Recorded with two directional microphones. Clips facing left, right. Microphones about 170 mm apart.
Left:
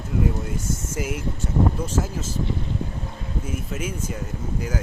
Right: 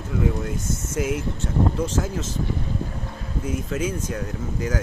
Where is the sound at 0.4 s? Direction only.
10° left (ahead or behind).